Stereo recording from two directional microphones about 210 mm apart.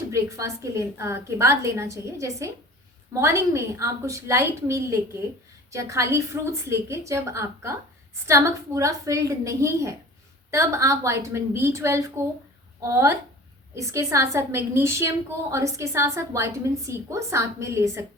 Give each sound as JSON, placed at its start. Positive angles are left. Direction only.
{"t": 0.1, "sound": "a woman's voice", "side_deg": -15}